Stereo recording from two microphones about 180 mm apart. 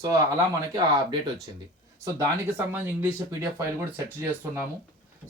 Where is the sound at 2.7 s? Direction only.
15° right (ahead or behind).